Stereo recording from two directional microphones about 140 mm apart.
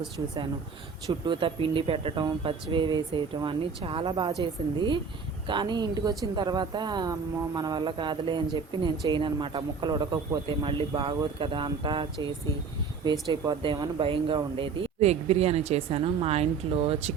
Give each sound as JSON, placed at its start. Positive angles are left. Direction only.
{"t": 1.0, "sound": "a man's voice", "side_deg": -35}
{"t": 5.5, "sound": "a man's voice", "side_deg": -35}
{"t": 13.1, "sound": "speech", "side_deg": -30}